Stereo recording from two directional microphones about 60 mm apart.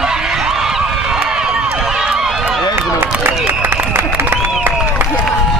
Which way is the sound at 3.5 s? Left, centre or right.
Right.